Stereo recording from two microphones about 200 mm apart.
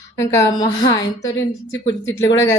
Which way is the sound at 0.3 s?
20° left (ahead or behind).